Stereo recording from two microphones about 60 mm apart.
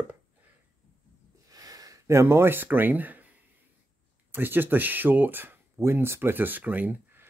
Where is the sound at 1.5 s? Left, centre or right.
Right.